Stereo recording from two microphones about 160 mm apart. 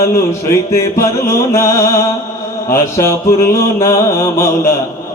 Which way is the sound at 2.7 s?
15° left (ahead or behind).